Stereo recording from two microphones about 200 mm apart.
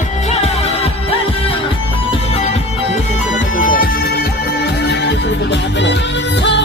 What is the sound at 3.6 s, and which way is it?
Music, 45° left (ahead or behind).